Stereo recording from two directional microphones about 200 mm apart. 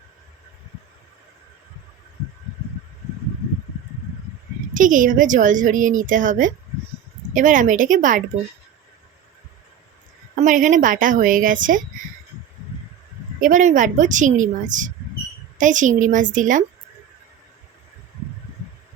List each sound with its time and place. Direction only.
4.7 s speech: 40° right (ahead or behind)
10.4 s speech: 40° right (ahead or behind)
13.4 s speech: 40° right (ahead or behind)